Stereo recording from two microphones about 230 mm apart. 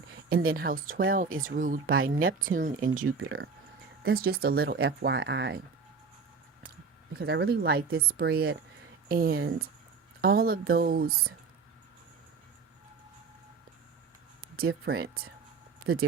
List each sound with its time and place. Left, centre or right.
0.5 s speech: right
3.0 s speech: right
3.2 s speech: right
7.2 s speech: right
14.7 s speech: right
15.9 s speech: right